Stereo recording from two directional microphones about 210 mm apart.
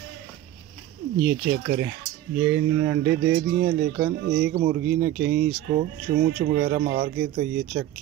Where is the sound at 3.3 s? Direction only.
55° right (ahead or behind).